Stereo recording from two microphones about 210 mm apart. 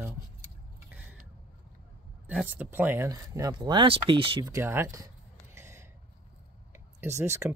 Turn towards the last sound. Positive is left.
turn(degrees=-15)  # may be behind; listen again after turning